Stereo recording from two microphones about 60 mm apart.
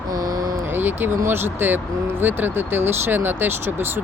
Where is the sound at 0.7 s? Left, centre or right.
Right.